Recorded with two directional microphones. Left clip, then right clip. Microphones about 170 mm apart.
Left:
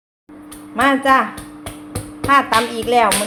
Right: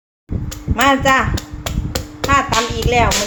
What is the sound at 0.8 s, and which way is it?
Speech, 10° right (ahead or behind).